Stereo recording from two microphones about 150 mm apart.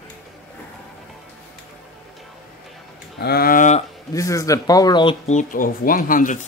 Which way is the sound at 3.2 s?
90° left.